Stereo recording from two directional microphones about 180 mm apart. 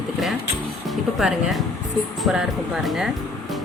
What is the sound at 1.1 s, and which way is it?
Speech, centre (ahead or behind).